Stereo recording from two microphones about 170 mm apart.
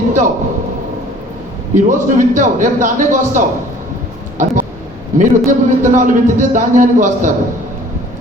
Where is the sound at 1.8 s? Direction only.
50° right (ahead or behind).